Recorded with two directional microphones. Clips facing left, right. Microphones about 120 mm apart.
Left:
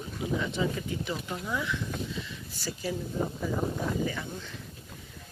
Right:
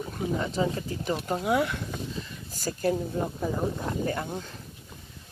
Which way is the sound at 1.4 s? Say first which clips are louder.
Right 9 dB; 65° right (ahead or behind).